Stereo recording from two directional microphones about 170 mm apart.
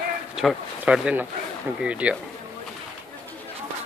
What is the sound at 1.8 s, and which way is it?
Speech, 5° right (ahead or behind).